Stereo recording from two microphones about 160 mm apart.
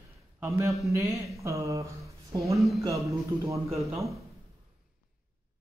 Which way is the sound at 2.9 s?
20° right (ahead or behind).